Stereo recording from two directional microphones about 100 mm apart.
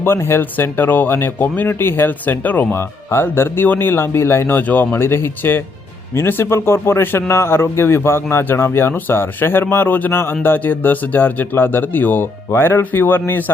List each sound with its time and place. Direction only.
0.0 s speech: 25° left (ahead or behind)